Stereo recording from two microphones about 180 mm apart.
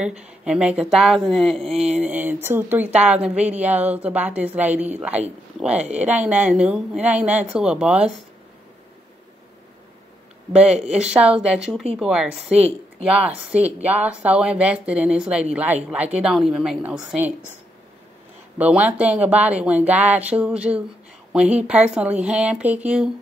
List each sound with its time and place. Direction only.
0.0 s a woman's voice: 5° right (ahead or behind)
10.5 s speech: 35° right (ahead or behind)
11.0 s a woman's voice: 5° right (ahead or behind)
12.4 s speech: 35° right (ahead or behind)
13.0 s a woman's voice: 5° right (ahead or behind)
18.6 s a woman's voice: 10° right (ahead or behind)